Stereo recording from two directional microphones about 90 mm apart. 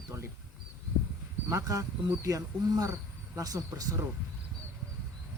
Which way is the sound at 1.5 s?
40° right (ahead or behind).